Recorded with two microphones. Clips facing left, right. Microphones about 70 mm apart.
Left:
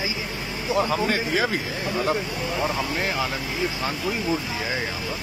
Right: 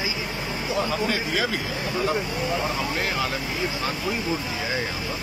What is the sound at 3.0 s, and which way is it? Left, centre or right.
Speech, centre.